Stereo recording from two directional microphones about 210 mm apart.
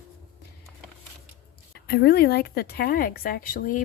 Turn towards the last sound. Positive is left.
turn(degrees=40)  # may be behind; listen again after turning